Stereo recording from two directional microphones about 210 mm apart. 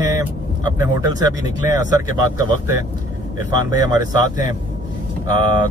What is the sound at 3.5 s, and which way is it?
Speech, 20° right (ahead or behind).